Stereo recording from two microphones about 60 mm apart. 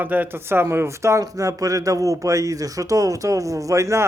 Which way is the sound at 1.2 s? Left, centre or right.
Right.